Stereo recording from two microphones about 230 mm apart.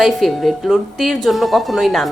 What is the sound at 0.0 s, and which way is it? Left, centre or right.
A woman's voice, centre.